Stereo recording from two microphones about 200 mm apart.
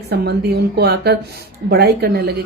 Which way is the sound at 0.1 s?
55° right (ahead or behind).